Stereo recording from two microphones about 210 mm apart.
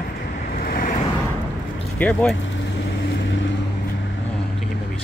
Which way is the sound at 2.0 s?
5° left (ahead or behind).